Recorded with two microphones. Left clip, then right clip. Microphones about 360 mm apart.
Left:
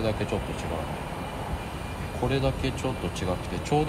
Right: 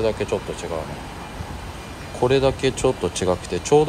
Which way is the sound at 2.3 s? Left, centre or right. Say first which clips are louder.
Right 10 dB; centre.